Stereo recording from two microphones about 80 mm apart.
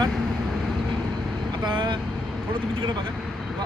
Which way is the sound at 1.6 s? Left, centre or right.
Right.